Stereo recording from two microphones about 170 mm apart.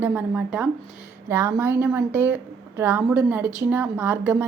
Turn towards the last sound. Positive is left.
turn(degrees=-10)  # may be behind; listen again after turning